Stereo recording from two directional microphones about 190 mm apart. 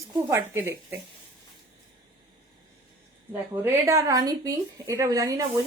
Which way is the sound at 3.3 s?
10° right (ahead or behind).